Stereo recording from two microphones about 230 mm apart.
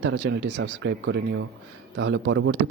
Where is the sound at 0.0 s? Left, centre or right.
Right.